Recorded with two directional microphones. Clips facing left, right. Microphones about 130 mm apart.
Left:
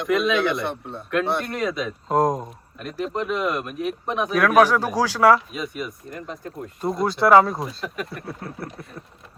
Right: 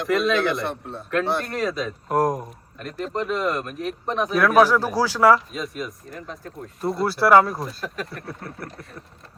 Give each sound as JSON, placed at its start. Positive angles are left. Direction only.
{"t": 0.0, "sound": "speech", "side_deg": 0}
{"t": 2.1, "sound": "speech", "side_deg": 20}
{"t": 2.4, "sound": "speech", "side_deg": 0}
{"t": 7.1, "sound": "speech", "side_deg": 20}
{"t": 7.4, "sound": "speech", "side_deg": 0}